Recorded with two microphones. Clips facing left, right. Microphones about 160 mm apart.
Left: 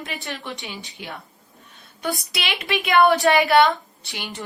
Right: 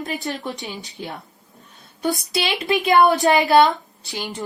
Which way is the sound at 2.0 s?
25° right (ahead or behind).